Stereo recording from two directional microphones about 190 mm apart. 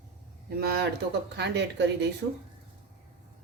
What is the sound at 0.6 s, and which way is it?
Speech, 60° right (ahead or behind).